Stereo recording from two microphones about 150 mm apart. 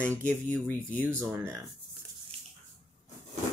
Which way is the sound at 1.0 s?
15° right (ahead or behind).